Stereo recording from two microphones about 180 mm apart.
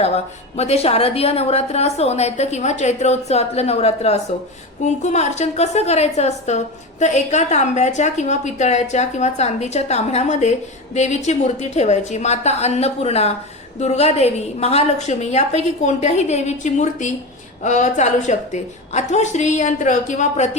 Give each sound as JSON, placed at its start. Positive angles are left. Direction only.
{"t": 0.5, "sound": "a woman's voice", "side_deg": 35}